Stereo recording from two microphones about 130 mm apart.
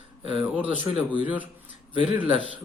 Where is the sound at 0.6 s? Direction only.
10° right (ahead or behind).